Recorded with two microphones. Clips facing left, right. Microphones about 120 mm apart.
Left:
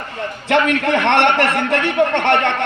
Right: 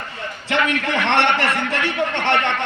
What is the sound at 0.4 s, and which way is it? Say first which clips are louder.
A man's voice: left 5 dB; 55° left (ahead or behind).